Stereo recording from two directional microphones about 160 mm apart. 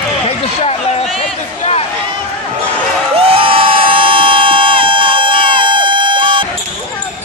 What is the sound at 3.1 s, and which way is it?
Crowd, 35° right (ahead or behind).